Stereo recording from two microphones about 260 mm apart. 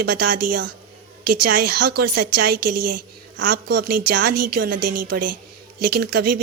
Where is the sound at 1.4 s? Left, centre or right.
Right.